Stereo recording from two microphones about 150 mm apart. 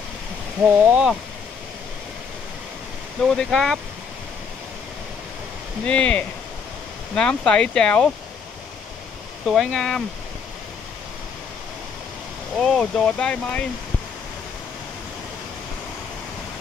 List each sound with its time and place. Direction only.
0.6 s speech: 15° right (ahead or behind)
3.3 s speech: centre (ahead or behind)
5.9 s speech: 5° left (ahead or behind)
9.5 s speech: centre (ahead or behind)
12.5 s speech: 5° left (ahead or behind)